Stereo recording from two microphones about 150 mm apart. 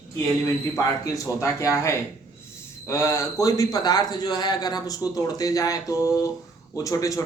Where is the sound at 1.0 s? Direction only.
20° left (ahead or behind).